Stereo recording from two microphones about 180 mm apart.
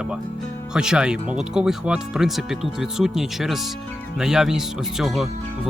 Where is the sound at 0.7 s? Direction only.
5° right (ahead or behind).